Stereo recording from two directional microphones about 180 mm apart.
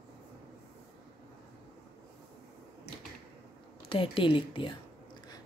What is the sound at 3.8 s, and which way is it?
Speech, 30° left (ahead or behind).